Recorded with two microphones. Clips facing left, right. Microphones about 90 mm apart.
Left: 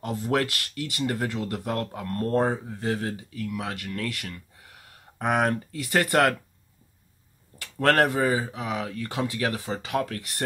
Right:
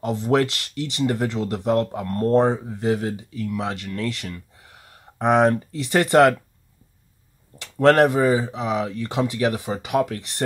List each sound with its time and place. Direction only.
0.0 s speech: 20° right (ahead or behind)
7.5 s speech: 20° right (ahead or behind)